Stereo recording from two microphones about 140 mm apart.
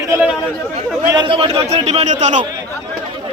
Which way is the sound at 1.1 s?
35° right (ahead or behind).